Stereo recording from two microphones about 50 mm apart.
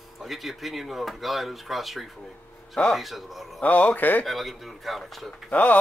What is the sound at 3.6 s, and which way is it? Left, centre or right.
Speech, left.